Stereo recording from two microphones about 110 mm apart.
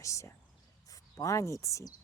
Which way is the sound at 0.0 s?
25° left (ahead or behind).